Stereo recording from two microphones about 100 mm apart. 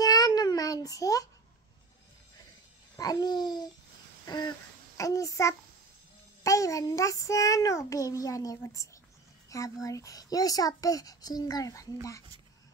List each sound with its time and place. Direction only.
0.0 s child singing: 40° left (ahead or behind)
3.0 s babbling: 40° left (ahead or behind)
4.9 s a child's voice: 35° left (ahead or behind)